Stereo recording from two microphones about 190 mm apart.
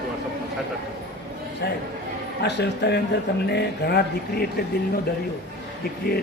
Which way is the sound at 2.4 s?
60° left (ahead or behind).